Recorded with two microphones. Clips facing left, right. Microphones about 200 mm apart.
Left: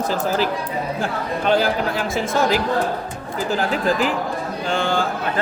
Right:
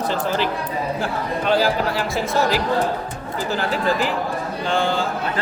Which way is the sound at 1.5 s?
50° left (ahead or behind).